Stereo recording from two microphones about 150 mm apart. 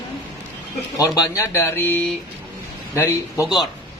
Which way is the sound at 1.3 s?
15° left (ahead or behind).